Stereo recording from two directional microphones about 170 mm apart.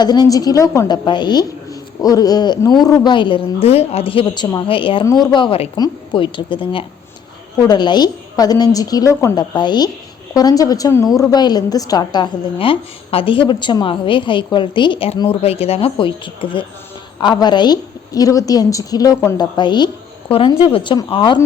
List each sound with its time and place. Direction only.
0.0 s a woman's voice: 25° left (ahead or behind)